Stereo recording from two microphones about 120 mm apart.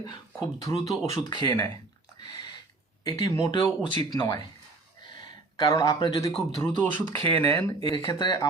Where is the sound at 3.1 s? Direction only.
30° left (ahead or behind).